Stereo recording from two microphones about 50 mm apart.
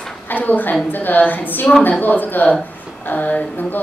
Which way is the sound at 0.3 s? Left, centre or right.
Left.